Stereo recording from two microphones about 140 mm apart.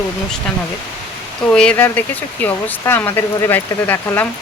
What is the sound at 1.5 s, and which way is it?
Speech, 5° left (ahead or behind).